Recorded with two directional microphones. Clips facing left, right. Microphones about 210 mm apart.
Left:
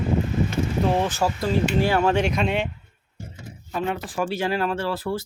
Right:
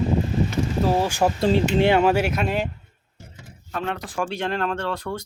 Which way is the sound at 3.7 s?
5° left (ahead or behind).